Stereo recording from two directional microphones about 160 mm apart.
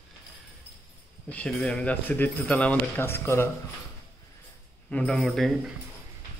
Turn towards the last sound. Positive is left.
turn(degrees=0)  # may be behind; listen again after turning